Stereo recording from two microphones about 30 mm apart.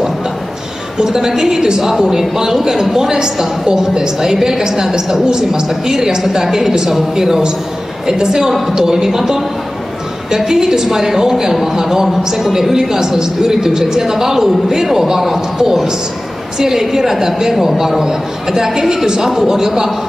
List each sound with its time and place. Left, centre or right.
0.9 s a woman's voice: centre